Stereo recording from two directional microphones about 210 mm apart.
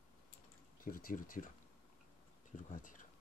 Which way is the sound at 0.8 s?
40° left (ahead or behind).